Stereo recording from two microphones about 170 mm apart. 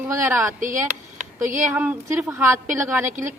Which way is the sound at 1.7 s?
10° right (ahead or behind).